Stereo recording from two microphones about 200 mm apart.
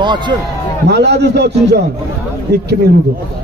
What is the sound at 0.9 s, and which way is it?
Speech, 55° right (ahead or behind).